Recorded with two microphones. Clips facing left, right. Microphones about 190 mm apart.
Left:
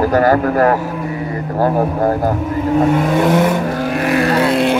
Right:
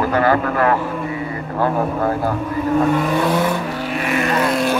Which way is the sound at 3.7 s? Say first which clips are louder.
Left 5 dB; 45° left (ahead or behind).